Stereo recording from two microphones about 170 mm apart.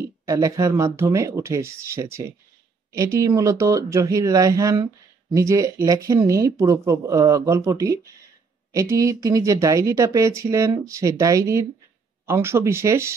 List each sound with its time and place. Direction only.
0.0 s speech: 20° right (ahead or behind)